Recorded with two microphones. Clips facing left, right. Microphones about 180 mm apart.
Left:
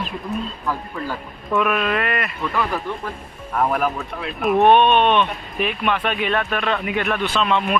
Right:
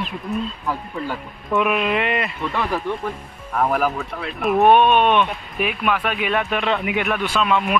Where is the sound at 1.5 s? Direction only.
15° right (ahead or behind).